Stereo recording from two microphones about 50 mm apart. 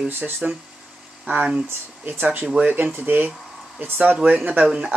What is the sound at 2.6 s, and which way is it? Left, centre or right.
Speech, right.